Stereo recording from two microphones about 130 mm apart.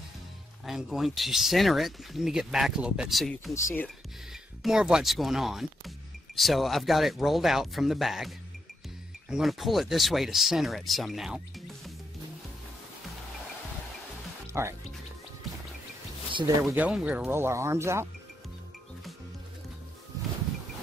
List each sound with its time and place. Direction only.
0.7 s speech: 5° right (ahead or behind)
4.6 s speech: 5° right (ahead or behind)
14.5 s speech: 20° right (ahead or behind)
16.6 s speech: 10° right (ahead or behind)